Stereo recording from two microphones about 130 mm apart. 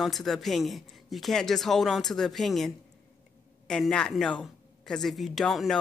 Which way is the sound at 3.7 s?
5° left (ahead or behind).